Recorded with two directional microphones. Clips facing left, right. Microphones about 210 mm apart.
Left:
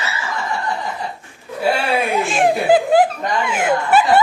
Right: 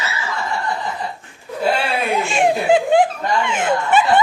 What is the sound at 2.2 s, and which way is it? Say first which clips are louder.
Snicker: left 1 dB; centre (ahead or behind).